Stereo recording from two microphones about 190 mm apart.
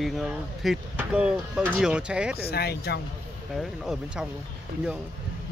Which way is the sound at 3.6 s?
Centre (ahead or behind).